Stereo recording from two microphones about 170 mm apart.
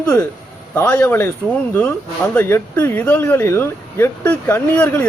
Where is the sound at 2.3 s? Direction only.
10° left (ahead or behind).